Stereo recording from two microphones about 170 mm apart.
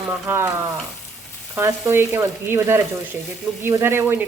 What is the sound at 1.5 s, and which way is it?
Speech, 15° right (ahead or behind).